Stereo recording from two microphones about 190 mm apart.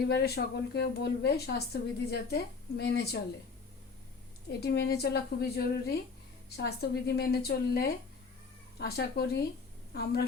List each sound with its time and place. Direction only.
0.1 s a woman's voice: 60° left (ahead or behind)
4.4 s a woman's voice: 60° left (ahead or behind)